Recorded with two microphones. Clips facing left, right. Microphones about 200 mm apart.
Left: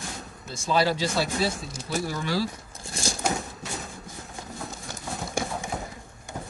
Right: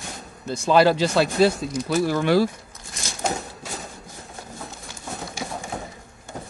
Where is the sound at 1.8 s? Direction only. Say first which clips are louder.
Right 8 dB; 80° right; by 2.5 s 60° right (ahead or behind).